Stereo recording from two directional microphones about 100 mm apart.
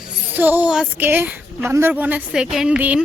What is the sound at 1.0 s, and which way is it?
A woman's voice, 20° right (ahead or behind).